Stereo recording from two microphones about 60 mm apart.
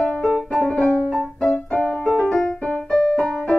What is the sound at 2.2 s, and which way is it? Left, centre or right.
Keyboard, centre.